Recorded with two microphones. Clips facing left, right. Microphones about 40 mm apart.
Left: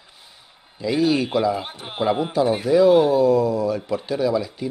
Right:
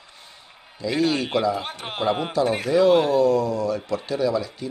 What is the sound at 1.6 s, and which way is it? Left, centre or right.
Speech, right.